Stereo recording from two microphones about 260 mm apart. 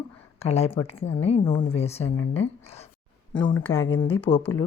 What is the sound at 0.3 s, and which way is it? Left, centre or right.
Speech, left.